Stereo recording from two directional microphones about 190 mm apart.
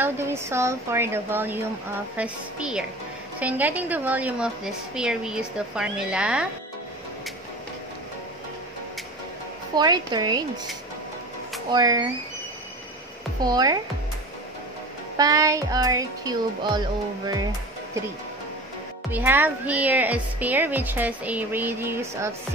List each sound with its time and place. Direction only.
0.0 s a woman's voice: 15° right (ahead or behind)
9.8 s music: 20° right (ahead or behind)
11.7 s music: 20° right (ahead or behind)
13.4 s music: 20° right (ahead or behind)
15.1 s music: 20° right (ahead or behind)
19.1 s a woman's voice: 10° right (ahead or behind)